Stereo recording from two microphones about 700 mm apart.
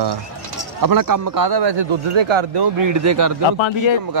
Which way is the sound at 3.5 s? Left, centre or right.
Left.